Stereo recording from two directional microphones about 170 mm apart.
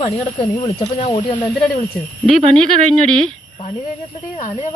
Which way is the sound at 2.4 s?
30° right (ahead or behind).